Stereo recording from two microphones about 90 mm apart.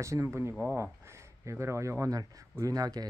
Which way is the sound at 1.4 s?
30° right (ahead or behind).